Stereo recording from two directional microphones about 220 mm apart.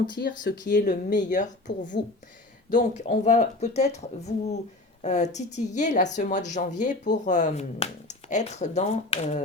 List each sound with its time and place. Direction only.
0.1 s speech: 50° left (ahead or behind)
0.7 s speech: 35° left (ahead or behind)